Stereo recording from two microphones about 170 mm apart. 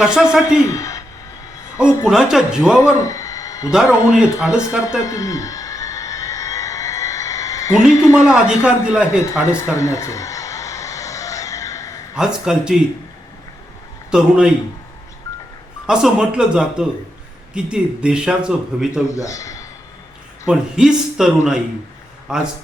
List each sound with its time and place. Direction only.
0.0 s speech: 5° right (ahead or behind)
0.6 s speech: 20° left (ahead or behind)
2.0 s speech: 5° right (ahead or behind)
2.7 s a sound: 15° left (ahead or behind)
4.5 s speech: 5° right (ahead or behind)
5.0 s a sound: 20° left (ahead or behind)
8.3 s a man's voice: 10° right (ahead or behind)
9.0 s a sound: 15° left (ahead or behind)
12.1 s speech: 5° right (ahead or behind)
14.1 s speech: 5° right (ahead or behind)
15.9 s speech: 5° right (ahead or behind)
19.0 s speech: 20° left (ahead or behind)
20.5 s speech: 5° right (ahead or behind)